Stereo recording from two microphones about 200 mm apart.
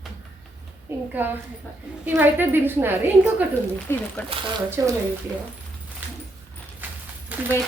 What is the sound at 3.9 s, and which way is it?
Speech, 10° left (ahead or behind).